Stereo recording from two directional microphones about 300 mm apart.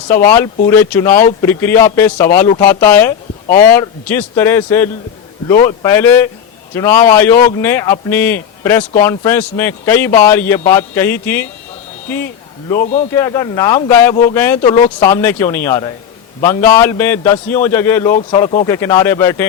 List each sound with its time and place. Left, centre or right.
0.3 s a man's voice: centre
14.8 s speech: left
15.0 s a man's voice: centre